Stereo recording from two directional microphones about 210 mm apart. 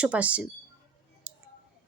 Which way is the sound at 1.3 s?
5° right (ahead or behind).